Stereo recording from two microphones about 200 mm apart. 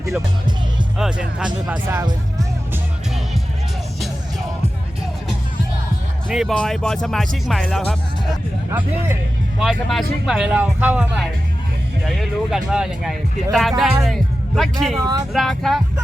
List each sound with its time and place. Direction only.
0.9 s speech: 5° right (ahead or behind)
2.0 s speech: 20° right (ahead or behind)
6.2 s speech: centre (ahead or behind)
9.6 s speech: centre (ahead or behind)